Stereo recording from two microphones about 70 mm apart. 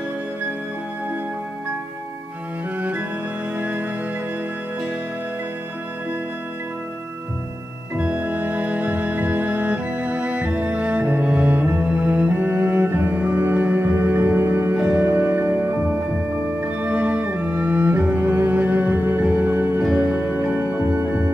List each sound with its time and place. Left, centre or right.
3.5 s music: right
8.0 s music: right